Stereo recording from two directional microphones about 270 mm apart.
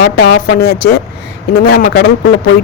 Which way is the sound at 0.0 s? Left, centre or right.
Left.